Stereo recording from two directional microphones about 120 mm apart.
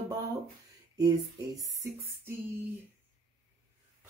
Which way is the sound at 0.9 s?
30° right (ahead or behind).